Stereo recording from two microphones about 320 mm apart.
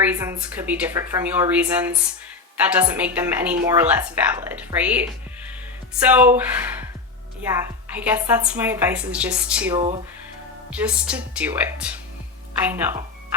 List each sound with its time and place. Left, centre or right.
0.0 s a woman's voice: centre
9.7 s speech: centre
10.7 s a woman's voice: centre